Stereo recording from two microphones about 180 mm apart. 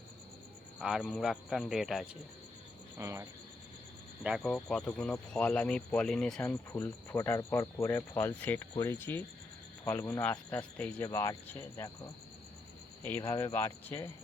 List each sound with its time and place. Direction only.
0.8 s speech: 5° right (ahead or behind)
3.0 s speech: 15° right (ahead or behind)
4.2 s speech: centre (ahead or behind)
11.0 s speech: 15° left (ahead or behind)
13.1 s speech: 15° left (ahead or behind)